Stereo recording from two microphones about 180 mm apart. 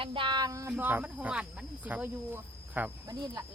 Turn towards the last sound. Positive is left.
turn(degrees=-20)  # may be behind; listen again after turning